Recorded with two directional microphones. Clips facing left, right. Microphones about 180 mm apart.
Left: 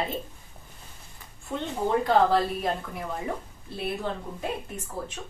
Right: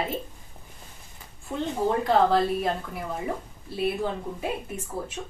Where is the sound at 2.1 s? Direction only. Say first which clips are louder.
Right 1 dB; centre (ahead or behind).